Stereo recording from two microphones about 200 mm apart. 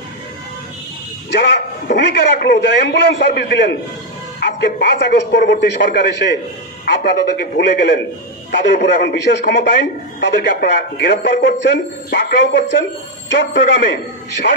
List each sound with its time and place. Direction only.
1.3 s a man's voice: 60° left (ahead or behind)